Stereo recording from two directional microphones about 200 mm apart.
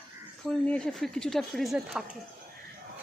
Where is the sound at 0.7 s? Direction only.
Centre (ahead or behind).